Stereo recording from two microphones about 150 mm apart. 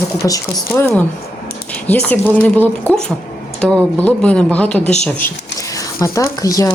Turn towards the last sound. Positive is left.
turn(degrees=20)  # may be behind; listen again after turning